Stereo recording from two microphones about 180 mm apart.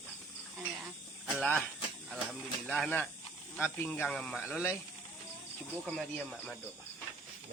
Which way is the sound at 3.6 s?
10° left (ahead or behind).